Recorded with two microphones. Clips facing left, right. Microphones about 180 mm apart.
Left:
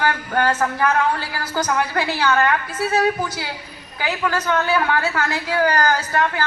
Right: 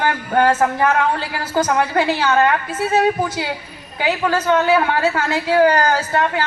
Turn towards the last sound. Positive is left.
turn(degrees=-25)  # may be behind; listen again after turning